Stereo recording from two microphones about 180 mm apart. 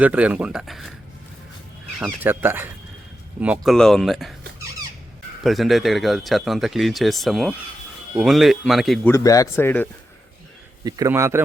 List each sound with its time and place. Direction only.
0.0 s speech: 10° right (ahead or behind)
2.0 s speech: 10° right (ahead or behind)
5.4 s speech: centre (ahead or behind)
9.0 s speech: 15° left (ahead or behind)
10.8 s speech: 20° right (ahead or behind)